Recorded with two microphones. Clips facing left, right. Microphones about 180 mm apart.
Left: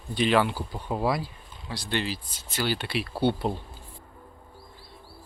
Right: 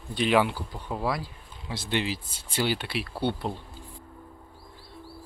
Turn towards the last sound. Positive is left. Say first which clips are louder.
# left 4 dB
turn(degrees=5)  # may be behind; listen again after turning